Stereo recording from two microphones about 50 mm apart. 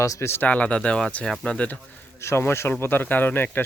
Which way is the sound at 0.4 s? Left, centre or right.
Left.